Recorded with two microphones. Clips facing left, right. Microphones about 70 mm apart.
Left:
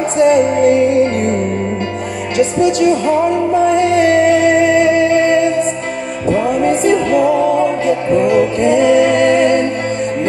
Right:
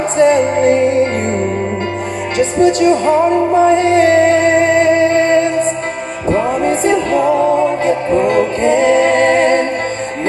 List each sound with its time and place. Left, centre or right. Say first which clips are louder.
0.2 s music: even; right
2.3 s music: right 1 dB; right